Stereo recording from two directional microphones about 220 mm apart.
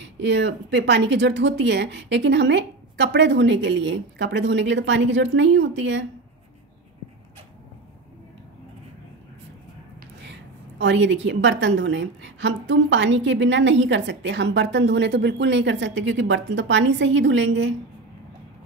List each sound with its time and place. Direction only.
0.0 s speech: 55° right (ahead or behind)
10.8 s a woman's voice: 55° right (ahead or behind)